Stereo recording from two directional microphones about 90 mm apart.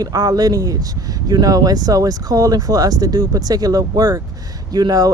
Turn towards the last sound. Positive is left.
turn(degrees=-45)  # may be behind; listen again after turning